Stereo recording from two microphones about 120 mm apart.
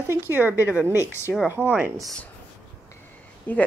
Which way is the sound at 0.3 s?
15° right (ahead or behind).